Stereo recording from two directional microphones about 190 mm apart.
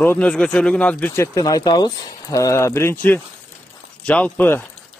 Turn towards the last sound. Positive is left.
turn(degrees=10)  # may be behind; listen again after turning